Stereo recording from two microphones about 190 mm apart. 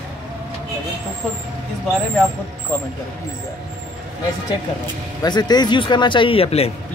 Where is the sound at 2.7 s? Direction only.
10° left (ahead or behind).